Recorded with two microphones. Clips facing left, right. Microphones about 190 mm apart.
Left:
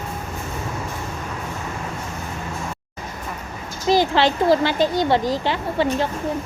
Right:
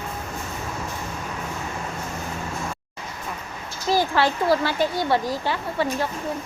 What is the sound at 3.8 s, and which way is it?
A child's voice, 20° left (ahead or behind).